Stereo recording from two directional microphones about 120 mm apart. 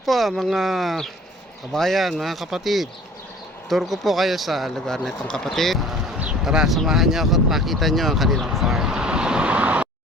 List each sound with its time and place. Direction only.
0.0 s speech: centre (ahead or behind)